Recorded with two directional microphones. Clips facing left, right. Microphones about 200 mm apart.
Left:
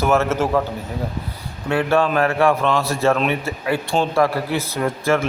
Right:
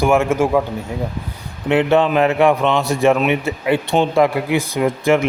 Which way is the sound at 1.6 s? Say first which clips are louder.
Right 4 dB; 20° right (ahead or behind).